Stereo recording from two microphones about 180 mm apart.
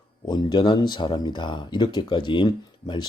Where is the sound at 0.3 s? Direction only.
25° left (ahead or behind).